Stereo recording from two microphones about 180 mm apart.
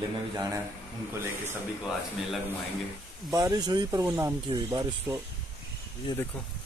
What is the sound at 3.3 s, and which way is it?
Speech, 20° right (ahead or behind).